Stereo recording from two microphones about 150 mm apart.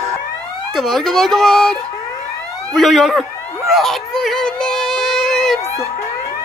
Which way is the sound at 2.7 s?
Centre (ahead or behind).